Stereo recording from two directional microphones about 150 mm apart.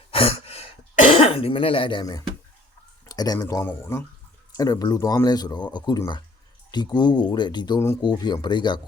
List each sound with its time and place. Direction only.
0.1 s sigh: 40° left (ahead or behind)
1.2 s speech: 40° left (ahead or behind)
3.1 s a sound: 25° left (ahead or behind)
3.3 s speech: 15° left (ahead or behind)